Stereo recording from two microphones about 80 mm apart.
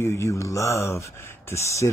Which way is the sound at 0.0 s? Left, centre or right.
Left.